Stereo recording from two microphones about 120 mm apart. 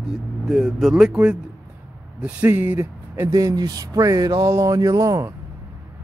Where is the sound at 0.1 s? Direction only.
5° right (ahead or behind); by 5.3 s 25° right (ahead or behind).